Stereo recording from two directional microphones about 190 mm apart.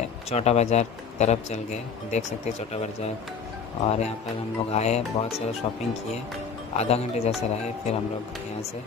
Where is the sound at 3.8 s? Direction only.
35° left (ahead or behind).